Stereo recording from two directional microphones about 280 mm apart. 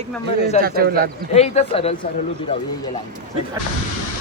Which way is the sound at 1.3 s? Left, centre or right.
Left.